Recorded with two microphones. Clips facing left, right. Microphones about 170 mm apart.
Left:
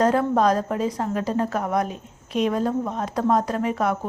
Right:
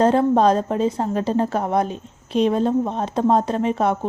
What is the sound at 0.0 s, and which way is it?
A woman's voice, 30° right (ahead or behind).